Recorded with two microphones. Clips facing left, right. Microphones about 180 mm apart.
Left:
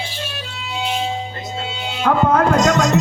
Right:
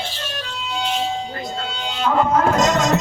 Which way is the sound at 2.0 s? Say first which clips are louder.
Left 2 dB; 60° left (ahead or behind).